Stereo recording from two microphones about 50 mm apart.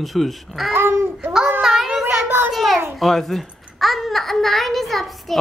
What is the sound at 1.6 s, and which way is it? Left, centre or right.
Child singing, centre.